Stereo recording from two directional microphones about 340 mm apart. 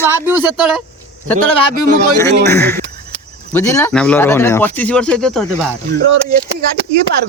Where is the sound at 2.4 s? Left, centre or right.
Centre.